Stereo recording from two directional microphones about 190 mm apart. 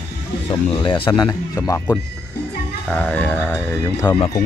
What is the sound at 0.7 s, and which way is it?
Speech, 25° left (ahead or behind).